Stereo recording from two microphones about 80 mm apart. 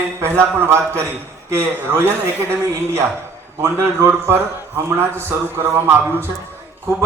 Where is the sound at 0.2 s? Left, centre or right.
Right.